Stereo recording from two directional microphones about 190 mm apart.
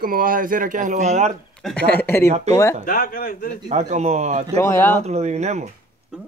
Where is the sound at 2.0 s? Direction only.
10° left (ahead or behind).